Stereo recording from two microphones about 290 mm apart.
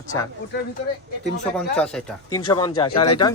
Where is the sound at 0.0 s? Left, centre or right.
Centre.